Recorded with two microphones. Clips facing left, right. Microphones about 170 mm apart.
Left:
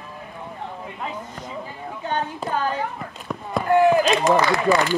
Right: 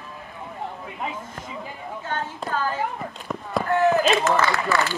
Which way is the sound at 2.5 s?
15° left (ahead or behind).